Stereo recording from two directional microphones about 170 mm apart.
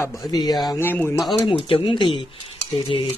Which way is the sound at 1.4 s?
30° left (ahead or behind).